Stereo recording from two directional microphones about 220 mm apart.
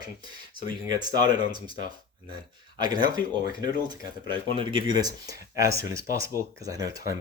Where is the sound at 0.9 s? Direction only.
20° right (ahead or behind).